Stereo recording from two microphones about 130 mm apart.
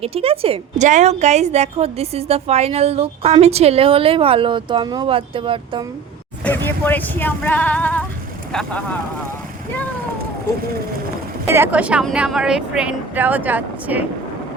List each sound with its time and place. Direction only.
0.0 s a woman's voice: 50° right (ahead or behind)
0.8 s a woman's voice: 70° right (ahead or behind); by 5.8 s 40° right (ahead or behind)
6.4 s speech: 15° left (ahead or behind)
11.4 s speech: 20° right (ahead or behind)